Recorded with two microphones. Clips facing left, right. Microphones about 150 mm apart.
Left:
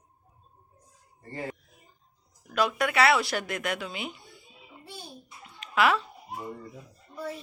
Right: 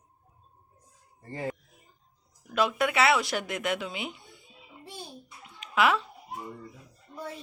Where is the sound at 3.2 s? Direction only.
20° right (ahead or behind).